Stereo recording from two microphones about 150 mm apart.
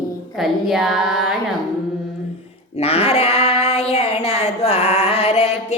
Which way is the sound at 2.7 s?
40° left (ahead or behind).